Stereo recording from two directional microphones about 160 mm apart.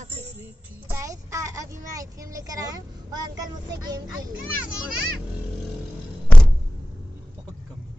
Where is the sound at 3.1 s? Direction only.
25° right (ahead or behind).